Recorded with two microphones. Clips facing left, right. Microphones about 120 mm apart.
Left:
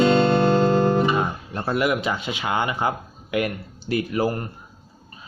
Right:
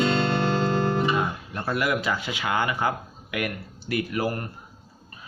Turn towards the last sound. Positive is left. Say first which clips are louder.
# left 4 dB
turn(degrees=25)  # may be behind; listen again after turning